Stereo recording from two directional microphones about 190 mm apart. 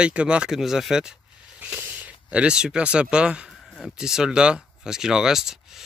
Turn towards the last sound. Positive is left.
turn(degrees=0)  # may be behind; listen again after turning